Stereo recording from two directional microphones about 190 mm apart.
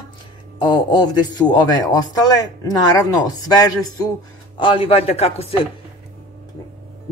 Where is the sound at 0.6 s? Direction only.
25° left (ahead or behind).